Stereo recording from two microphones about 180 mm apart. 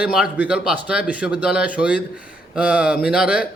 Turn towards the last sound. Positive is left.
turn(degrees=-5)  # may be behind; listen again after turning